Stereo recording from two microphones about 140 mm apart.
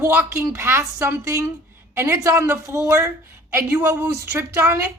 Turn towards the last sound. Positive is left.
turn(degrees=-15)  # may be behind; listen again after turning